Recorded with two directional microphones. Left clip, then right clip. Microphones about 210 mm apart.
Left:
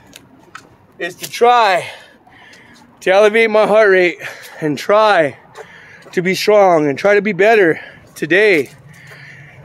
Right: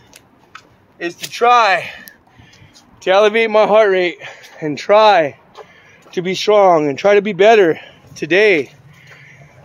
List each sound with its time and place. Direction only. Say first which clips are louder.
0.1 s scissors: left 3 dB; 10° left (ahead or behind)
1.3 s speech: even; 15° left (ahead or behind)
3.0 s speech: left 1 dB; centre (ahead or behind)